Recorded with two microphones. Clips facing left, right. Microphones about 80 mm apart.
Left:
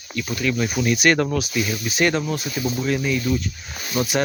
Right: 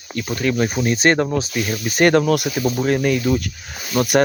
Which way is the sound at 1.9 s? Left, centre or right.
Right.